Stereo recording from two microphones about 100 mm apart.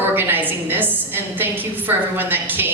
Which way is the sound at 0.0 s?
20° right (ahead or behind).